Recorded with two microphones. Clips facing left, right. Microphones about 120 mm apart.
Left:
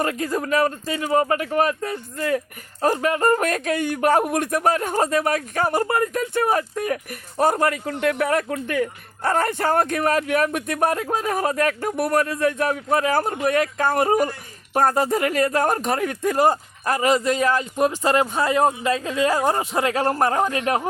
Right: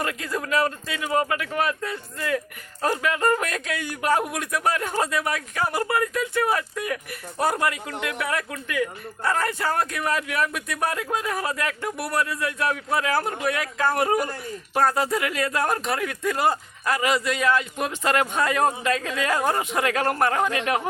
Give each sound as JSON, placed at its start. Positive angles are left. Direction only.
{"t": 0.0, "sound": "speech", "side_deg": 40}
{"t": 14.8, "sound": "speech", "side_deg": 45}